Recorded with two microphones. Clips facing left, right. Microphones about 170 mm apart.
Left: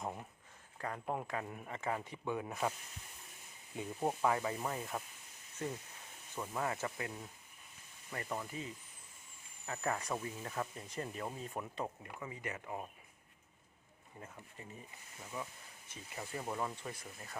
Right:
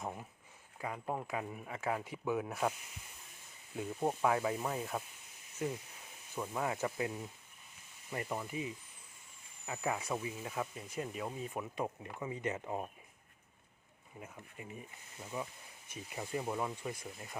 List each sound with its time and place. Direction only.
0.0 s speech: centre (ahead or behind)
3.8 s speech: centre (ahead or behind)
8.3 s speech: 10° right (ahead or behind)
12.2 s speech: 20° right (ahead or behind)
14.6 s speech: 15° right (ahead or behind)